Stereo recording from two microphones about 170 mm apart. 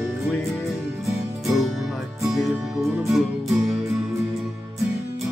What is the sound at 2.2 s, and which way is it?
Music, centre (ahead or behind).